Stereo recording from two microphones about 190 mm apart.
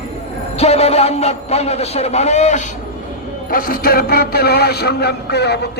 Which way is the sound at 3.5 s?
50° left (ahead or behind).